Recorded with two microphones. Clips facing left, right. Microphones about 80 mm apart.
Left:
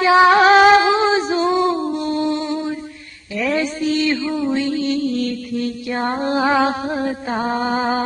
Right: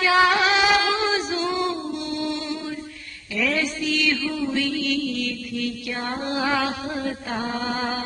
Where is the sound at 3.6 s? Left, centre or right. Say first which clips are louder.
Left 6 dB; left.